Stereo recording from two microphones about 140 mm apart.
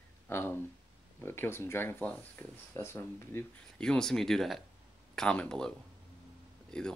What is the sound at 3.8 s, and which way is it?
Speech, 5° left (ahead or behind).